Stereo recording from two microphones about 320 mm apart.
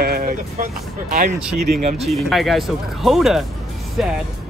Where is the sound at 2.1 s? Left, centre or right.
Centre.